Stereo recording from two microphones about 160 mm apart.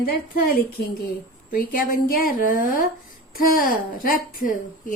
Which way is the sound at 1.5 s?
60° left (ahead or behind).